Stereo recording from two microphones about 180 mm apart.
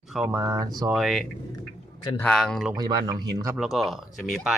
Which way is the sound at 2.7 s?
20° right (ahead or behind).